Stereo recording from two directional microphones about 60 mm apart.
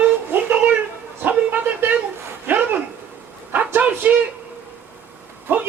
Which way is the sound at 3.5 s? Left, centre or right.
Right.